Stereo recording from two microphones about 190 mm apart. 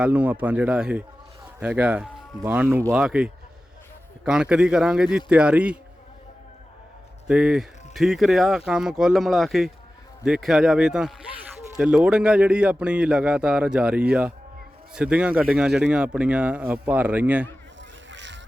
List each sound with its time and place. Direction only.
0.0 s a man's voice: 10° right (ahead or behind)
7.3 s a man's voice: 5° right (ahead or behind)
18.1 s music: 70° right (ahead or behind)